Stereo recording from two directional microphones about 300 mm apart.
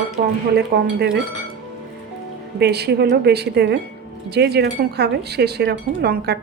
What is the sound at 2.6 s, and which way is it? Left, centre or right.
Speech, right.